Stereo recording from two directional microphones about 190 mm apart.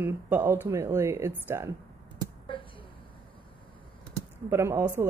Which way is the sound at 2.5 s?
25° left (ahead or behind).